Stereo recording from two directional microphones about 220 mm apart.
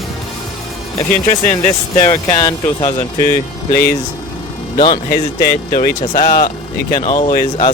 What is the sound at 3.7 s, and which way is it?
Speech, 45° left (ahead or behind).